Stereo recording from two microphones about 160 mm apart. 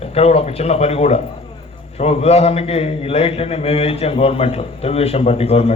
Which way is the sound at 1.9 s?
40° left (ahead or behind).